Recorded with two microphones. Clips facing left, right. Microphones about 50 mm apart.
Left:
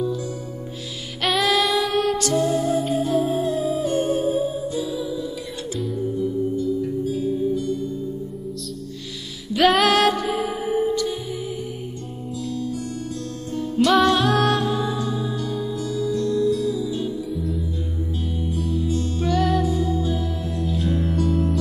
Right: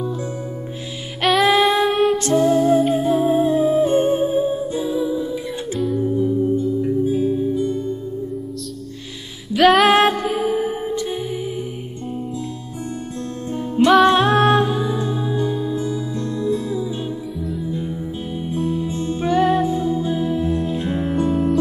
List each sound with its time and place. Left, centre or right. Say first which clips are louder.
1.4 s music: right 5 dB; right
2.4 s music: right 6 dB; centre
2.7 s music: right 5 dB; right
9.5 s music: right 4 dB; centre
9.8 s music: right 3 dB; right
13.5 s music: right 4 dB; right
18.5 s music: right 3 dB; right